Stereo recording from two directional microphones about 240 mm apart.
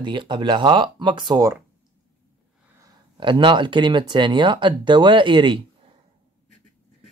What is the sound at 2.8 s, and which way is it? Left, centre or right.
Speech, centre.